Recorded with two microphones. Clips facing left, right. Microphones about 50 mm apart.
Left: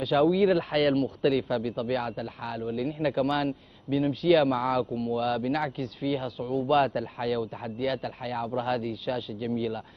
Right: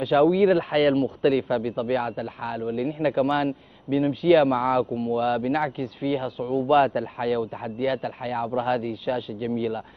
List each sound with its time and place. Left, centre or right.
0.0 s a man's voice: centre